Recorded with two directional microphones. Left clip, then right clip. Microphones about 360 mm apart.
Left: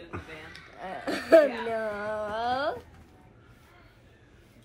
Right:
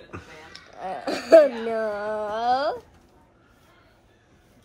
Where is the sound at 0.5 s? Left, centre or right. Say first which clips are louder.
Right 8 dB; centre.